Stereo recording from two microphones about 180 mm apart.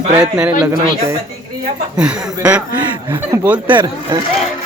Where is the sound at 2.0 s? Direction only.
5° right (ahead or behind).